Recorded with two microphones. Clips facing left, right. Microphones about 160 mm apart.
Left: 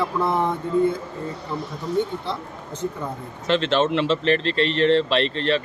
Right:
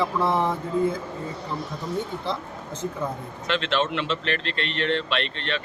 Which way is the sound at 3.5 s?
35° left (ahead or behind).